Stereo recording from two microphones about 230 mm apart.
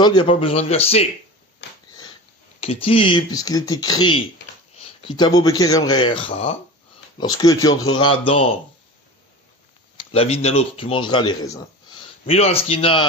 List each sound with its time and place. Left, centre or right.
0.0 s speech: left
2.6 s a man's voice: left
9.9 s speech: left